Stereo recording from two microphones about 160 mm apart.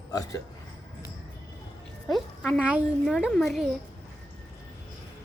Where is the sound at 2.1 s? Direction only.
5° right (ahead or behind).